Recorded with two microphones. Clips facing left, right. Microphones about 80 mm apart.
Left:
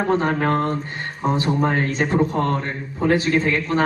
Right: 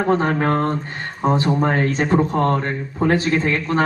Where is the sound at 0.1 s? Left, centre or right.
Right.